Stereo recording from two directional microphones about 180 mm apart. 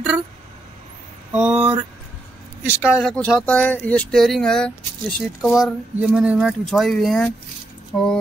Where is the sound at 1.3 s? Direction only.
5° right (ahead or behind).